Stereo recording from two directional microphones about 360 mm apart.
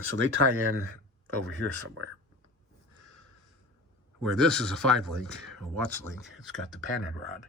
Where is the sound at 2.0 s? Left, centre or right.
Right.